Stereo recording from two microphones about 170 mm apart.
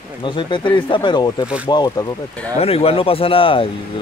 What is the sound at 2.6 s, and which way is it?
A man's voice, 35° left (ahead or behind).